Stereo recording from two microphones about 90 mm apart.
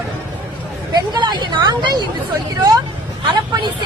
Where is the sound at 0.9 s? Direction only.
55° right (ahead or behind).